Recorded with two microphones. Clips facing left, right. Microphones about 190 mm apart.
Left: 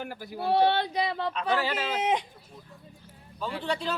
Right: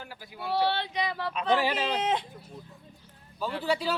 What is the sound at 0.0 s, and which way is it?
Speech, 50° left (ahead or behind).